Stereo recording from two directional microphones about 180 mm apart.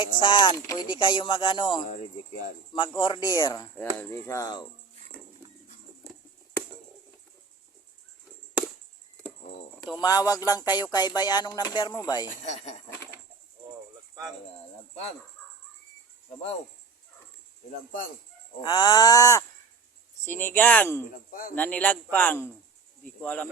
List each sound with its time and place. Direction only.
0.0 s a man's voice: 25° left (ahead or behind)
10.0 s speech: 20° left (ahead or behind)
18.6 s a man's voice: 25° left (ahead or behind)
21.1 s speech: 50° left (ahead or behind)
21.5 s a man's voice: 10° left (ahead or behind)